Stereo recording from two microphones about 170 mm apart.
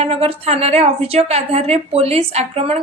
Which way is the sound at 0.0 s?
35° right (ahead or behind).